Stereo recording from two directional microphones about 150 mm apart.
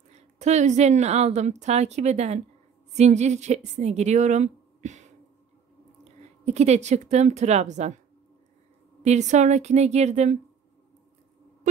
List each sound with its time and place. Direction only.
0.1 s a woman's voice: 50° right (ahead or behind)
6.4 s a woman's voice: 45° right (ahead or behind)
9.0 s a woman's voice: 50° right (ahead or behind)
11.7 s a sound: 55° right (ahead or behind)